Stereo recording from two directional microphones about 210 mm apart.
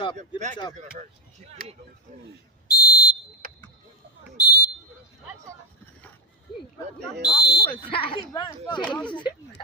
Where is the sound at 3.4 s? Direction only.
45° right (ahead or behind).